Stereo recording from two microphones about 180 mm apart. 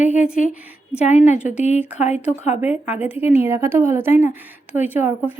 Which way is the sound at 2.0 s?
40° left (ahead or behind).